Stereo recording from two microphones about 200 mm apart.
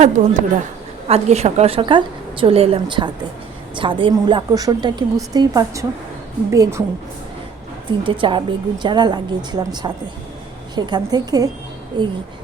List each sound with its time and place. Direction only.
0.2 s a woman's voice: 35° right (ahead or behind); by 6.8 s 15° right (ahead or behind)
7.9 s a woman's voice: 25° right (ahead or behind)